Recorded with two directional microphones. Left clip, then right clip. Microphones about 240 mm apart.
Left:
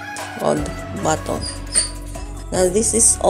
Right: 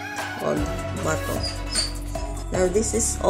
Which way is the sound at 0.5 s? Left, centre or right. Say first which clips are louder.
Left 7 dB; centre.